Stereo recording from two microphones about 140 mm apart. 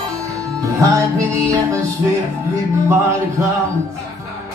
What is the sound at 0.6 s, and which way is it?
Music, 20° right (ahead or behind).